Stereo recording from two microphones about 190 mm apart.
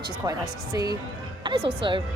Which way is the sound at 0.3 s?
20° right (ahead or behind).